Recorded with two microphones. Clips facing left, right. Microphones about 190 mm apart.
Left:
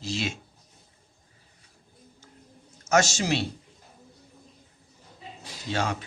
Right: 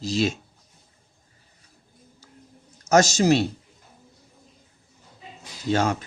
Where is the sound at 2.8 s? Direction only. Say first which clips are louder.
Right 5 dB; 40° right (ahead or behind).